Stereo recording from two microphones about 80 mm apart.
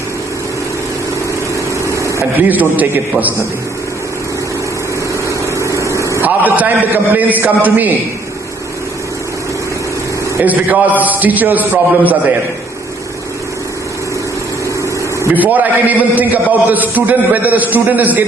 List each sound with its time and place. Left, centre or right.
1.9 s a sound: right
2.5 s a man's voice: right
5.3 s vehicle: right
6.2 s a man's voice: right
10.4 s a man's voice: right
15.4 s a man's voice: right